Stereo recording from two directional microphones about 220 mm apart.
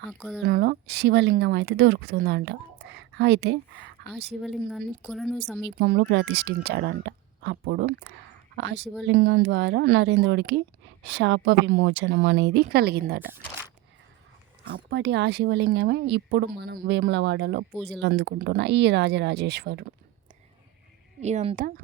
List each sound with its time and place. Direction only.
0.1 s speech: centre (ahead or behind)
0.4 s speech: 45° right (ahead or behind)
4.4 s speech: centre (ahead or behind)
5.8 s speech: 45° right (ahead or behind)
14.6 s speech: 50° right (ahead or behind)
21.2 s speech: 30° right (ahead or behind)